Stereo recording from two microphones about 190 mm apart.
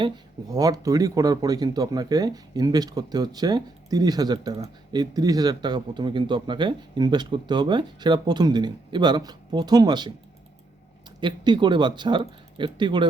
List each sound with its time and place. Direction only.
0.0 s speech: 20° right (ahead or behind)
11.2 s speech: 25° right (ahead or behind)